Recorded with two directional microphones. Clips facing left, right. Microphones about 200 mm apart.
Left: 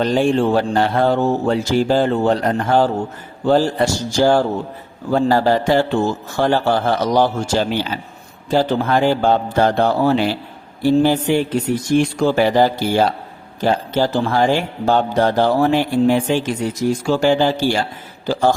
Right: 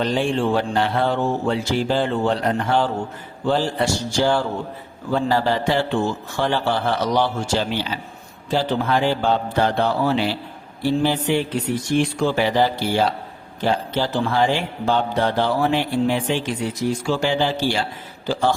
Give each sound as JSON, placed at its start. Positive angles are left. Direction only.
{"t": 0.0, "sound": "a man's voice", "side_deg": 45}